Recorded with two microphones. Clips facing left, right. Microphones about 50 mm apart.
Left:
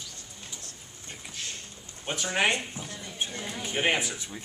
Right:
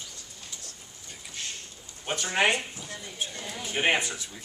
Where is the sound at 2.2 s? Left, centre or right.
Centre.